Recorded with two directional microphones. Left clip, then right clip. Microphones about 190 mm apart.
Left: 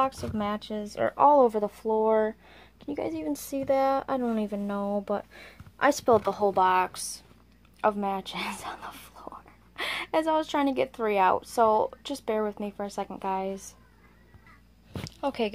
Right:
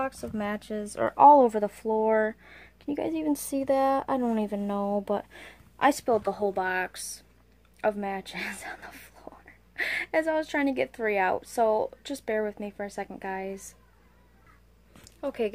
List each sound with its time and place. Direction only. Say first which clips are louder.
0.1 s speech: left 1 dB; 10° right (ahead or behind)
2.9 s speech: right 2 dB; 30° right (ahead or behind)
6.0 s speech: left 3 dB; centre (ahead or behind)
13.2 s speech: left 5 dB; 50° left (ahead or behind)
13.5 s speech: left 3 dB; centre (ahead or behind)
15.0 s a woman's voice: left 1 dB; 5° right (ahead or behind)